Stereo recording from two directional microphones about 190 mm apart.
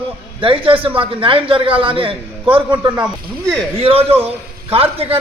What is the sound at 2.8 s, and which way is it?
Speech, 10° right (ahead or behind).